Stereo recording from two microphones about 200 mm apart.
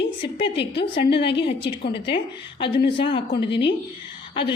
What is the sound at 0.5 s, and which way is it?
A woman's voice, 60° left (ahead or behind).